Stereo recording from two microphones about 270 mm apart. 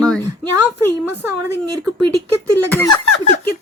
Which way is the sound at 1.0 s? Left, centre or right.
Centre.